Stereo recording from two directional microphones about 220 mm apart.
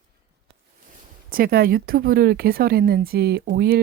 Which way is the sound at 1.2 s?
40° right (ahead or behind).